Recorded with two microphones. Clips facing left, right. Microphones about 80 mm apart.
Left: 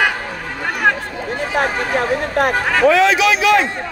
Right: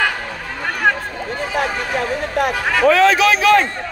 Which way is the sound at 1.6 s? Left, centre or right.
Left.